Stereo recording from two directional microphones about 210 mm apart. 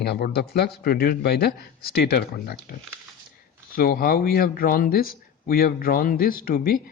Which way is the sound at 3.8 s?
45° left (ahead or behind).